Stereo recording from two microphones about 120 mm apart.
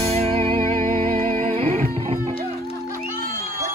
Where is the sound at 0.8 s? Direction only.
90° right.